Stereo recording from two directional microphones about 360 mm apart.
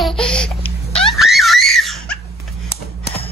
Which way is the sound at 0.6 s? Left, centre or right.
Centre.